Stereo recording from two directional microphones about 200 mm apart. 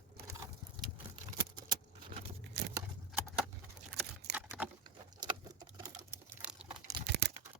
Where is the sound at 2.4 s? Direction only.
55° right (ahead or behind).